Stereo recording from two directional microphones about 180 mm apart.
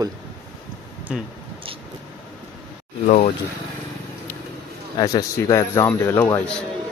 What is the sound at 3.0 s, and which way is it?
Speech, 45° left (ahead or behind).